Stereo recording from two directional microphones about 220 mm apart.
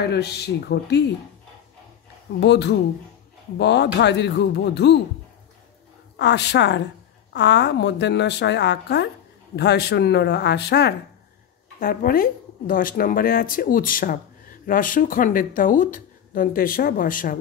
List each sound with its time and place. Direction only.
0.0 s a woman's voice: 50° left (ahead or behind)
2.4 s a woman's voice: 50° left (ahead or behind)
6.1 s a woman's voice: 50° left (ahead or behind)